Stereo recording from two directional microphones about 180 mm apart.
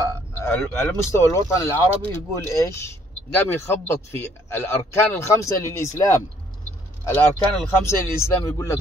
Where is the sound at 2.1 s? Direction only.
15° left (ahead or behind).